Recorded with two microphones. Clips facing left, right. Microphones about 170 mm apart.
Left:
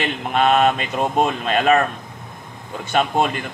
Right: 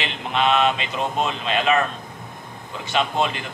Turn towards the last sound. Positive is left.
turn(degrees=50)  # may be behind; listen again after turning